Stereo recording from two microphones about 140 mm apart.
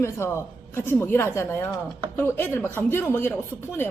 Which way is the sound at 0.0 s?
20° left (ahead or behind).